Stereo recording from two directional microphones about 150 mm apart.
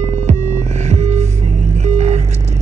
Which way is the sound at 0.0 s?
50° right (ahead or behind).